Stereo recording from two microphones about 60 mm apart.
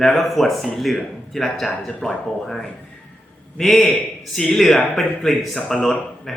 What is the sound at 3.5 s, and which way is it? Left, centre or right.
Speech, centre.